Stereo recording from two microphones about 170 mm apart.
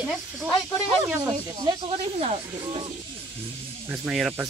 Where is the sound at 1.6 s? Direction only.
35° right (ahead or behind).